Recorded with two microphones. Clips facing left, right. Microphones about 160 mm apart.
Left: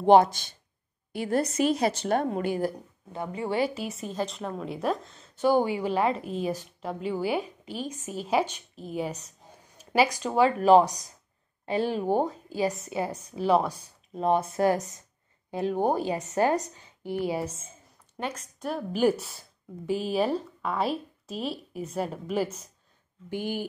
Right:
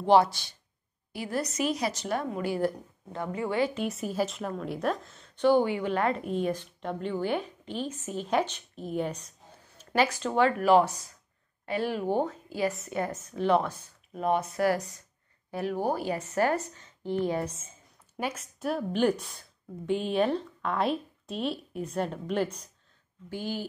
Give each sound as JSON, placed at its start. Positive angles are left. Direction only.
{"t": 1.2, "sound": "a woman's voice", "side_deg": 55}
{"t": 2.4, "sound": "a woman's voice", "side_deg": 15}
{"t": 3.3, "sound": "a woman's voice", "side_deg": 35}
{"t": 3.6, "sound": "a woman's voice", "side_deg": 5}
{"t": 12.1, "sound": "a woman's voice", "side_deg": 10}
{"t": 14.1, "sound": "a woman's voice", "side_deg": 30}
{"t": 18.1, "sound": "a woman's voice", "side_deg": -10}
{"t": 23.3, "sound": "a woman's voice", "side_deg": 15}